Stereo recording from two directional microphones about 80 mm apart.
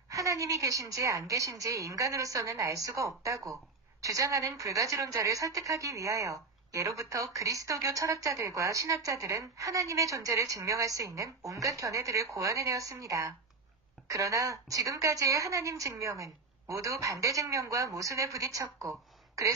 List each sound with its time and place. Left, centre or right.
0.1 s a woman's voice: right